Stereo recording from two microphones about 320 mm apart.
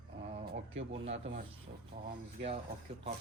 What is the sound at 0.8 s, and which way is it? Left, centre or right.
Speech, centre.